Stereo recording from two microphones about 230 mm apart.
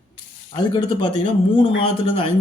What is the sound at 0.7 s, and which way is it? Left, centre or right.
Speech, left.